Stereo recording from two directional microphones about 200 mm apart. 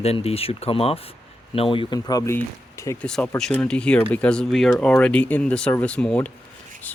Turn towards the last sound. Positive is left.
turn(degrees=5)  # may be behind; listen again after turning